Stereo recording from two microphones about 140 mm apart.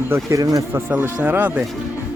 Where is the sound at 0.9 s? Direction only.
10° right (ahead or behind).